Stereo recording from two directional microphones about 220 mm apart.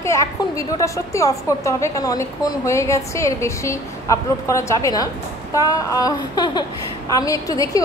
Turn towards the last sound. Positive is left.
turn(degrees=15)  # may be behind; listen again after turning